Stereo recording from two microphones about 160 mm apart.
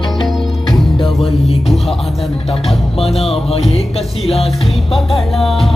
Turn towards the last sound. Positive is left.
turn(degrees=40)  # may be behind; listen again after turning